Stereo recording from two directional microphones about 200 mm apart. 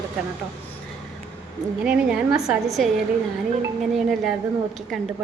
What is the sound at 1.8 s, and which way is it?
A woman's voice, 5° right (ahead or behind).